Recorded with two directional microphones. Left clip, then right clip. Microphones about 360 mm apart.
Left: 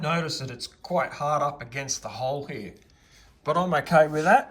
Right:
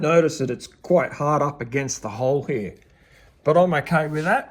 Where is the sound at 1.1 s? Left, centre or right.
Right.